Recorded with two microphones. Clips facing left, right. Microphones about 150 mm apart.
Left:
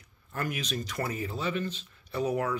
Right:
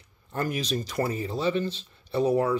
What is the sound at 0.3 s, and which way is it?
Speech, 35° right (ahead or behind).